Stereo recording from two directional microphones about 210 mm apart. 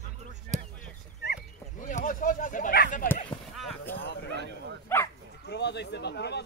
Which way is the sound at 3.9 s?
50° left (ahead or behind).